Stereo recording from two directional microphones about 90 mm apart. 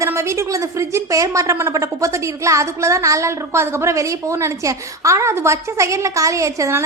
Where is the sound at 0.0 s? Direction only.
35° right (ahead or behind).